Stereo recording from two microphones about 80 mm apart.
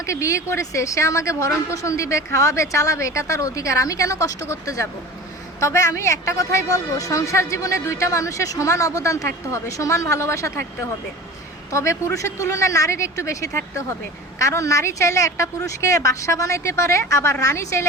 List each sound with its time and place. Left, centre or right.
0.0 s a man's voice: left